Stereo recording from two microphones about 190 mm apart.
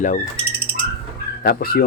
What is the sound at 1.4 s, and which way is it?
Speech, 55° left (ahead or behind).